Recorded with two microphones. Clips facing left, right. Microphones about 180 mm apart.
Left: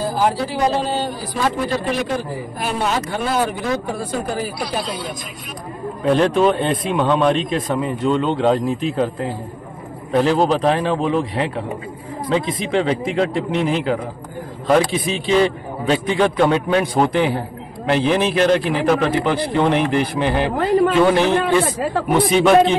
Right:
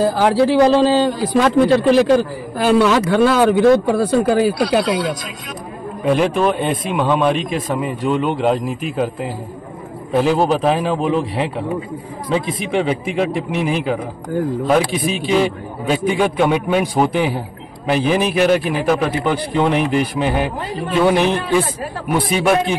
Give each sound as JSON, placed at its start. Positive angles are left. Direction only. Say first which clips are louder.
{"t": 0.0, "sound": "speech", "louder": "right 5 dB", "side_deg": -75}
{"t": 6.0, "sound": "a man's voice", "louder": "left 1 dB", "side_deg": 0}
{"t": 20.5, "sound": "speech", "louder": "left 9 dB", "side_deg": 70}
{"t": 21.1, "sound": "speech", "louder": "even", "side_deg": -15}